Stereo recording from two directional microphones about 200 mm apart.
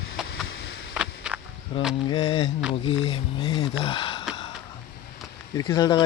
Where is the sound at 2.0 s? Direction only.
25° left (ahead or behind).